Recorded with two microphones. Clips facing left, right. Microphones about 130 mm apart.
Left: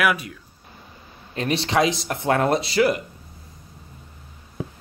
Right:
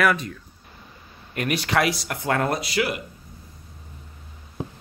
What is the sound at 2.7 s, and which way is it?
Speech, 40° left (ahead or behind).